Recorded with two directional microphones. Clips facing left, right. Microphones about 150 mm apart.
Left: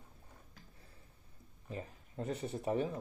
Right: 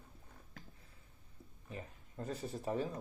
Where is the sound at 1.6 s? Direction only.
25° left (ahead or behind).